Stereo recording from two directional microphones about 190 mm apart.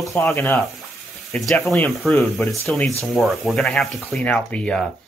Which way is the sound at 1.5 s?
Centre (ahead or behind).